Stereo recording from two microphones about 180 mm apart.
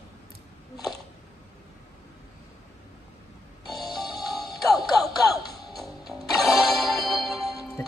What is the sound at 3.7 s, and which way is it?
Music, 20° left (ahead or behind).